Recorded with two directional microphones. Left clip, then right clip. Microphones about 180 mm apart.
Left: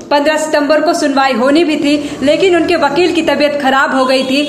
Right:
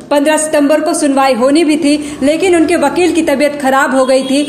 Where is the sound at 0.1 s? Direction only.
50° right (ahead or behind).